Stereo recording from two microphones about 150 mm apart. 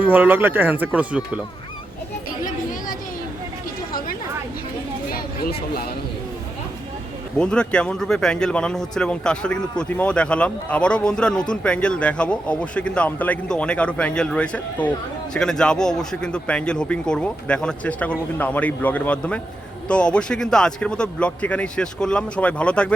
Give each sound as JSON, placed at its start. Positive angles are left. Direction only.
{"t": 0.0, "sound": "speech", "side_deg": -10}
{"t": 3.9, "sound": "chatter", "side_deg": 70}
{"t": 5.1, "sound": "a sound", "side_deg": 85}
{"t": 7.3, "sound": "a man's voice", "side_deg": 5}